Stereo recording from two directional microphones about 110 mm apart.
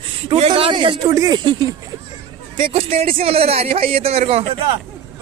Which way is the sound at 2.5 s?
60° right (ahead or behind).